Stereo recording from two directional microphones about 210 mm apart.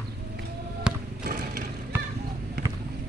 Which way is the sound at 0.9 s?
5° right (ahead or behind).